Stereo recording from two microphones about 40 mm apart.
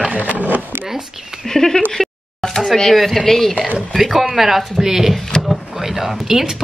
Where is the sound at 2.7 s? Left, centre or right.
Centre.